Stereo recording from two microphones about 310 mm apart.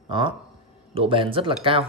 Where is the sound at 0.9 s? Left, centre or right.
Centre.